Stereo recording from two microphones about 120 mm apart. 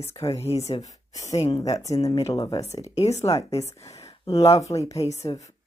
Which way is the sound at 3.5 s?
65° left (ahead or behind).